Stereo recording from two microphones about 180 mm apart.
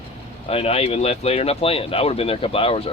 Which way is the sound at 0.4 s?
35° left (ahead or behind).